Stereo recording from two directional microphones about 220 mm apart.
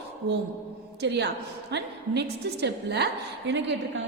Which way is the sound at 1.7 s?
50° right (ahead or behind).